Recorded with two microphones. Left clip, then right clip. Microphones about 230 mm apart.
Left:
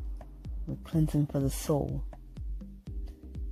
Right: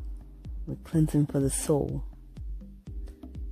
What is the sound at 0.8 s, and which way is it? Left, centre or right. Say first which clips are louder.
Speech: right 4 dB; right.